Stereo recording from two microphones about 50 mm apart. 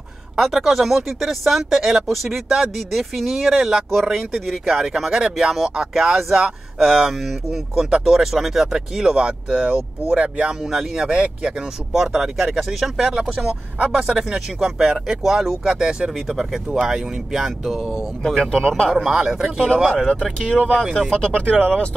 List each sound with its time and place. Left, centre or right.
0.4 s speech: centre
10.6 s speech: centre
11.1 s speech: right
11.9 s speech: centre
13.7 s speech: right
14.0 s speech: centre
16.3 s speech: centre
18.2 s speech: centre
18.9 s speech: centre
20.4 s speech: centre